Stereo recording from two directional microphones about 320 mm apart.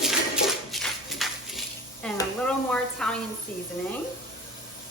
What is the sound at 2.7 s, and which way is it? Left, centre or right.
Speech, centre.